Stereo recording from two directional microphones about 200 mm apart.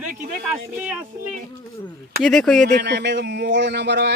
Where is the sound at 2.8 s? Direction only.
60° right (ahead or behind).